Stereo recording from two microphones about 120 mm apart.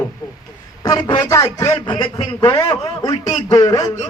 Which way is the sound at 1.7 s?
40° left (ahead or behind).